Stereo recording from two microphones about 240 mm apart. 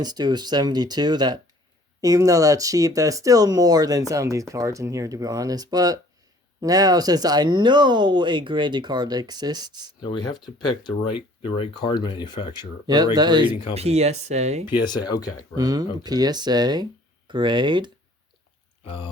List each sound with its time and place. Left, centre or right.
0.0 s speech: centre
10.0 s speech: centre
12.5 s speech: centre
14.7 s speech: centre
15.5 s speech: centre
18.9 s speech: left